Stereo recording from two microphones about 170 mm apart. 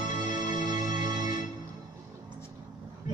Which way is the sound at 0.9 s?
25° right (ahead or behind).